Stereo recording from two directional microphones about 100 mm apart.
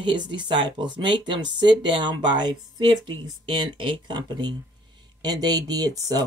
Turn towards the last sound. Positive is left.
turn(degrees=-40)  # may be behind; listen again after turning